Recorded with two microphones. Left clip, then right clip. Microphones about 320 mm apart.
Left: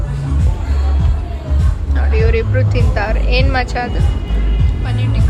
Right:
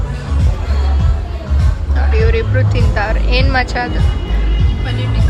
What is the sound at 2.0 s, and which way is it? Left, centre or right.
Speech, centre.